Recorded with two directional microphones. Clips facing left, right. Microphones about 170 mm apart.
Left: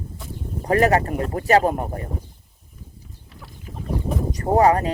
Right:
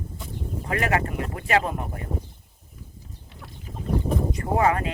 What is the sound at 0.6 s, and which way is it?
Speech, 40° left (ahead or behind).